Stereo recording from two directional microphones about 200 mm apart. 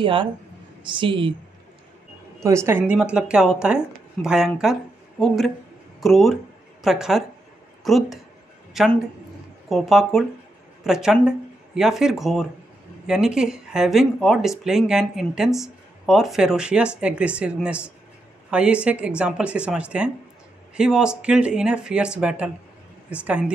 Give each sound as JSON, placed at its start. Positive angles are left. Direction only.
{"t": 0.0, "sound": "speech", "side_deg": -25}
{"t": 2.4, "sound": "speech", "side_deg": -15}